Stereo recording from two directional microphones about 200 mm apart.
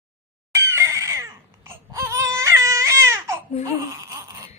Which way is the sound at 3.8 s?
15° right (ahead or behind).